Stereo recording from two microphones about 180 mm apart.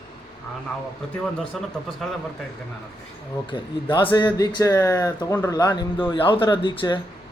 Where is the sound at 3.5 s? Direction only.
25° left (ahead or behind).